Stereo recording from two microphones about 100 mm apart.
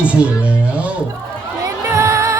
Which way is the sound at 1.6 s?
30° right (ahead or behind).